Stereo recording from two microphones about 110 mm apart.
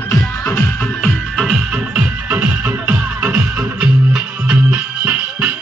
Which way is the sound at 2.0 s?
10° right (ahead or behind).